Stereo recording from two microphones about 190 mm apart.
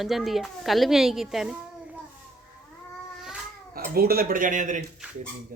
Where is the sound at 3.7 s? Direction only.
50° right (ahead or behind).